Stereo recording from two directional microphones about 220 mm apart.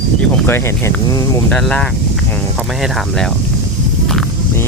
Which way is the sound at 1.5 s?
5° left (ahead or behind).